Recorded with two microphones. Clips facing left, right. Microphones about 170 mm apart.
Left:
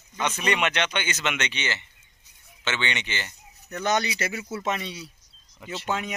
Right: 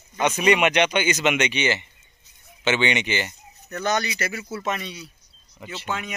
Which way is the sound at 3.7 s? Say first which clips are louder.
Right 1 dB; 20° left (ahead or behind).